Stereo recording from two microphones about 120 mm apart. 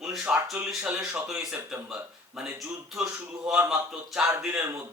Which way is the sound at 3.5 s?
20° right (ahead or behind).